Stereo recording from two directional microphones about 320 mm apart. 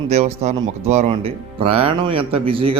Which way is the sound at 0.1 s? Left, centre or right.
Right.